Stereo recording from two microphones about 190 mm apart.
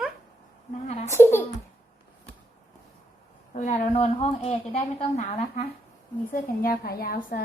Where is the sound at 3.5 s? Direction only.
40° left (ahead or behind).